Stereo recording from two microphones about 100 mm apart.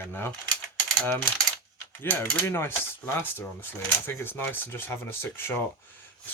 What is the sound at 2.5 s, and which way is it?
Speech, 20° left (ahead or behind).